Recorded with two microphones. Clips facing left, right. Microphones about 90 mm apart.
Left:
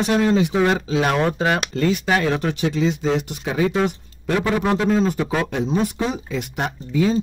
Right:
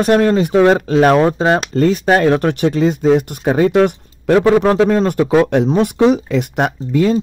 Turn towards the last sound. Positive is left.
turn(degrees=-70)  # may be behind; listen again after turning